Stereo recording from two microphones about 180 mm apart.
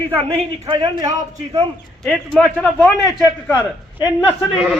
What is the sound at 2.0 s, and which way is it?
Speech, centre (ahead or behind).